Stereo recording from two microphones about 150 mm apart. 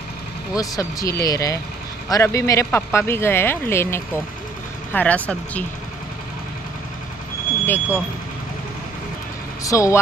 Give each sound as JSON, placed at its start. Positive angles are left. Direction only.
{"t": 0.6, "sound": "speech", "side_deg": 25}
{"t": 7.6, "sound": "speech", "side_deg": 15}
{"t": 9.6, "sound": "speech", "side_deg": 20}